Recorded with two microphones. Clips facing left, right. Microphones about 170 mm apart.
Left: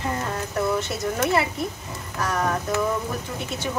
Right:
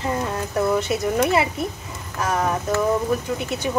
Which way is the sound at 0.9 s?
20° right (ahead or behind).